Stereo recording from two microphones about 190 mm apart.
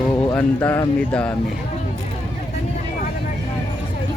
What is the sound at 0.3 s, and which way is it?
Speech, 15° left (ahead or behind).